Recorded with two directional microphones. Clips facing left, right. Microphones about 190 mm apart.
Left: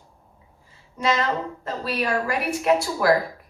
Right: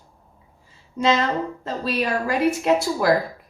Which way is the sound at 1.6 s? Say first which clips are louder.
Right 1 dB; 25° right (ahead or behind).